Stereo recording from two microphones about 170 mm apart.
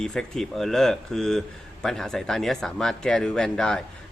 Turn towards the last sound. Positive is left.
turn(degrees=5)  # may be behind; listen again after turning